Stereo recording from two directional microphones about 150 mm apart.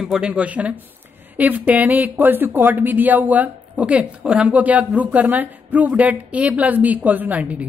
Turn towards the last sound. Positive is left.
turn(degrees=-10)  # may be behind; listen again after turning